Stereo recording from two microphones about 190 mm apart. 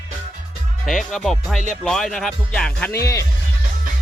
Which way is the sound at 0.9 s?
Centre (ahead or behind).